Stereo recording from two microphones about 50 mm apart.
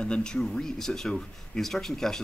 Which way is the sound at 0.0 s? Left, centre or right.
Centre.